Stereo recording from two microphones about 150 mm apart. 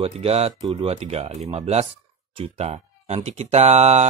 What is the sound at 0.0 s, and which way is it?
A man's voice, 40° right (ahead or behind).